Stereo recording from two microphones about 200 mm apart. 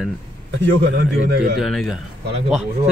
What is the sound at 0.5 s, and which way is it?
A man's voice, 60° right (ahead or behind).